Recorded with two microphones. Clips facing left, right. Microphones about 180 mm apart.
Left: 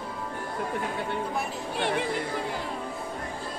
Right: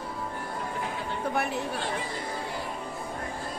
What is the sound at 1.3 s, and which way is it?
Speech, 65° right (ahead or behind).